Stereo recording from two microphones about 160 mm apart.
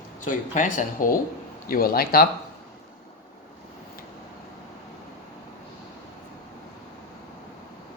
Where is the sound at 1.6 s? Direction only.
65° left (ahead or behind).